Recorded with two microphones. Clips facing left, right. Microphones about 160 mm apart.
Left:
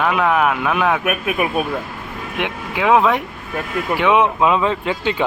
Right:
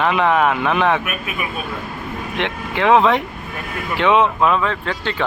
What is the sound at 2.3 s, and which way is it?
Speech, 5° left (ahead or behind).